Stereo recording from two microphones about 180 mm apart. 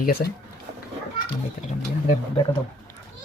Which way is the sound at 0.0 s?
60° left (ahead or behind).